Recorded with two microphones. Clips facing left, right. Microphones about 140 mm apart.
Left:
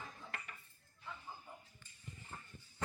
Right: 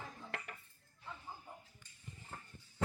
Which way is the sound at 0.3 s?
70° right (ahead or behind).